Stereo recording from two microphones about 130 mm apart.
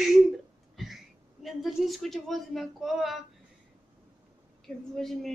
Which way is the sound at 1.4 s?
Centre (ahead or behind).